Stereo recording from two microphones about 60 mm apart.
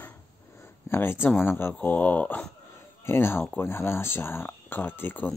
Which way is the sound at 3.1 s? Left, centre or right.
Left.